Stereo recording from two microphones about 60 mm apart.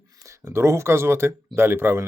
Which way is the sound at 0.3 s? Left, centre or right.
Right.